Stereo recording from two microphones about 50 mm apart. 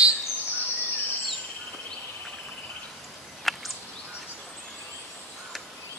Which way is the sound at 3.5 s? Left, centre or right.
Centre.